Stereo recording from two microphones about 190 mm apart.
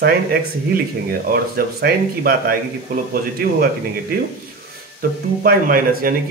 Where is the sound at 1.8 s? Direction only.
50° right (ahead or behind).